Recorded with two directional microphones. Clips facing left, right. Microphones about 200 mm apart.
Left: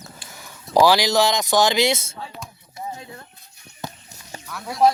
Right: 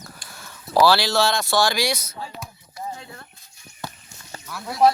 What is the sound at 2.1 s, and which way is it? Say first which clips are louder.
Speech: right 1 dB; 5° right (ahead or behind).